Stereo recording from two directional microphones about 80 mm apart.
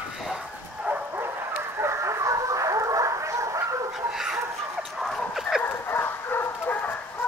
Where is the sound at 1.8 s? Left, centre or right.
Right.